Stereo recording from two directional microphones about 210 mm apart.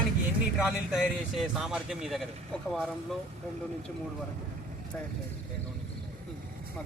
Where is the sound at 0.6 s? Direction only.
Centre (ahead or behind).